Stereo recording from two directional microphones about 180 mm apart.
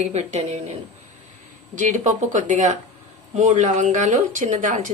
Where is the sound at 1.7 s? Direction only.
45° right (ahead or behind).